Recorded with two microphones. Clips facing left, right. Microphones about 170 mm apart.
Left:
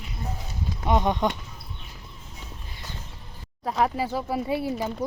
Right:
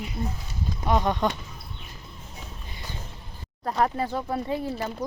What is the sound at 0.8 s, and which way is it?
Speech, 20° left (ahead or behind).